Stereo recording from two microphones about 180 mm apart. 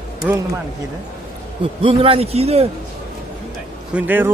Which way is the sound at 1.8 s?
30° right (ahead or behind).